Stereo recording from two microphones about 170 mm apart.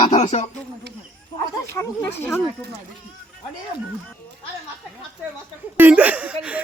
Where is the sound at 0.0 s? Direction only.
30° left (ahead or behind).